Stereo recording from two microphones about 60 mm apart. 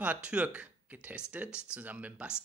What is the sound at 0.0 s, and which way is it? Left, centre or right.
Speech, right.